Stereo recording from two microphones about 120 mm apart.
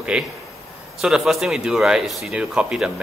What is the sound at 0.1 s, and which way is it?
A man's voice, 5° right (ahead or behind).